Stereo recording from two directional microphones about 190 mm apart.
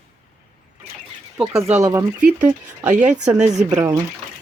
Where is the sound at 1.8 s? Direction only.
15° right (ahead or behind).